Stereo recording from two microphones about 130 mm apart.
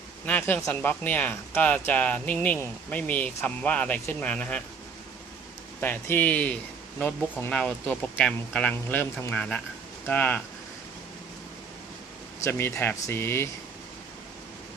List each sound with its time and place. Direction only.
0.3 s speech: 15° left (ahead or behind)
5.8 s speech: 15° left (ahead or behind)
12.4 s speech: 20° left (ahead or behind)